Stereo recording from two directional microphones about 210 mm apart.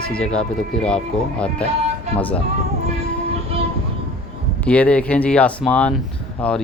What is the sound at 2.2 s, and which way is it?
Speech, 10° left (ahead or behind).